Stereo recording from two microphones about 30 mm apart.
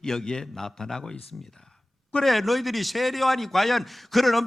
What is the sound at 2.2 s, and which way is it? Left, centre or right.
A man's voice, centre.